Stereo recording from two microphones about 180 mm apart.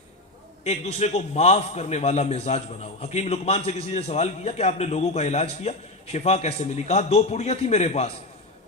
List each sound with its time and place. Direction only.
0.6 s a man's voice: 35° left (ahead or behind)